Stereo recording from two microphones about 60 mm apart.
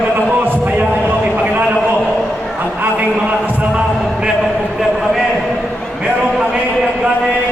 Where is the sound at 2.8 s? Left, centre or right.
Right.